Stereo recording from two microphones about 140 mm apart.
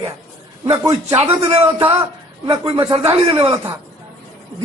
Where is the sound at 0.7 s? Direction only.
25° right (ahead or behind).